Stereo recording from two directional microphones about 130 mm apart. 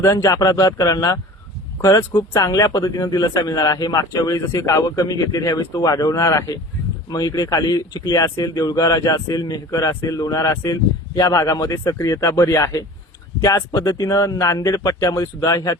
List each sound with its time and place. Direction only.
0.0 s speech: 25° left (ahead or behind)